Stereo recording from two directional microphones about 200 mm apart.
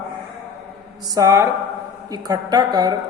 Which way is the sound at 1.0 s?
15° right (ahead or behind).